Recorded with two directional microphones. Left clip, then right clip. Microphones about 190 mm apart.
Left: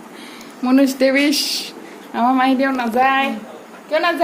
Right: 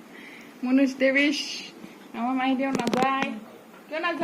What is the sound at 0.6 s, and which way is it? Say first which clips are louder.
Speech: left 8 dB; 10° left (ahead or behind).